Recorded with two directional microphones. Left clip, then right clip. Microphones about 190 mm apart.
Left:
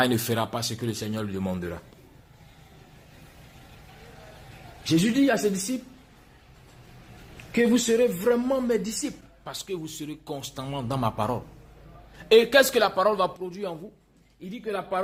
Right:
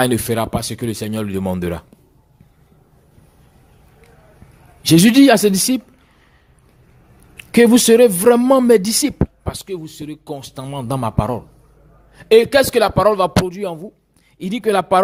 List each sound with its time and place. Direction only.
0.0 s a man's voice: 30° right (ahead or behind)
4.8 s speech: 55° right (ahead or behind)
7.5 s speech: 55° right (ahead or behind)
9.0 s a man's voice: 30° right (ahead or behind)
14.3 s speech: 50° right (ahead or behind)